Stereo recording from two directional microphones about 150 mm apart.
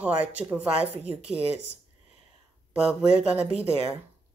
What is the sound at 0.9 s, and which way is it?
Speech, 45° right (ahead or behind).